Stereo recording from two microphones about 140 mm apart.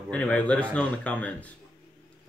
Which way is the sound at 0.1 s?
10° left (ahead or behind).